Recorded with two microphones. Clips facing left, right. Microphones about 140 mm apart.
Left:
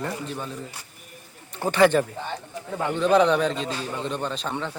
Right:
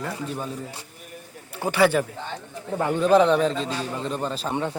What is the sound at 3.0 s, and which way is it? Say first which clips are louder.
A man's voice: right 1 dB; centre (ahead or behind).